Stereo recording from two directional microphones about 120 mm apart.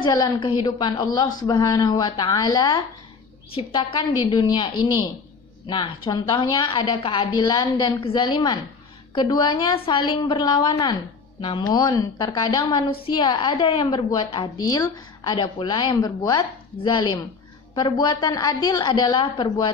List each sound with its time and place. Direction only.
0.0 s a woman's voice: 35° left (ahead or behind)